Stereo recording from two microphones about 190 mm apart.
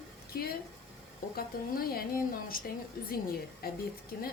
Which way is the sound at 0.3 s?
50° left (ahead or behind).